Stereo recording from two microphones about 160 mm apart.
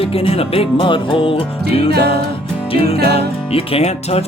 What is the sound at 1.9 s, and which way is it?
Music, 90° right.